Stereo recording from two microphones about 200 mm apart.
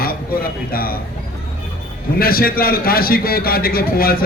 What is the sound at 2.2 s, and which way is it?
A man's voice, 50° left (ahead or behind).